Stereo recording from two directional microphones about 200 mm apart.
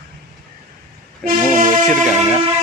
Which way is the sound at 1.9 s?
Centre (ahead or behind).